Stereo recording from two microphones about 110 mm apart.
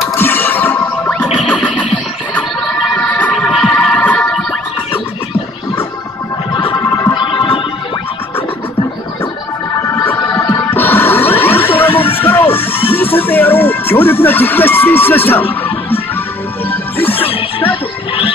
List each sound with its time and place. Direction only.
0.2 s music: 20° left (ahead or behind)
3.0 s a sound: 15° left (ahead or behind)
3.3 s music: centre (ahead or behind)
6.5 s a sound: 50° left (ahead or behind)
7.2 s music: 50° left (ahead or behind)
10.7 s music: 20° left (ahead or behind)
17.0 s music: 20° left (ahead or behind)